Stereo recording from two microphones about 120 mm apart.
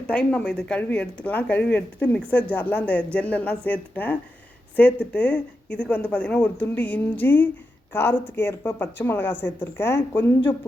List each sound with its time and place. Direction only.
0.1 s speech: 10° left (ahead or behind)